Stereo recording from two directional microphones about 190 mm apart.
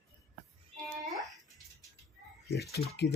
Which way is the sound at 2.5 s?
55° left (ahead or behind).